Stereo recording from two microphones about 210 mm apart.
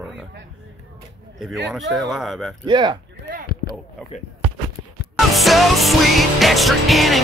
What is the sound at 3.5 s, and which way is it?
Speech, 45° left (ahead or behind).